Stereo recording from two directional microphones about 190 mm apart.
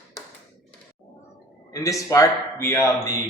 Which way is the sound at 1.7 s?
15° left (ahead or behind).